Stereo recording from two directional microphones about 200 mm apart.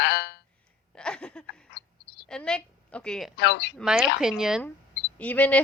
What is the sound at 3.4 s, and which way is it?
Speech, 60° left (ahead or behind).